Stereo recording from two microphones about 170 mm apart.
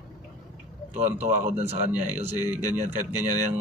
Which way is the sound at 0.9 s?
45° right (ahead or behind).